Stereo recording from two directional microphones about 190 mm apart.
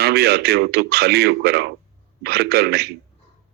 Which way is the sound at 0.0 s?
55° right (ahead or behind).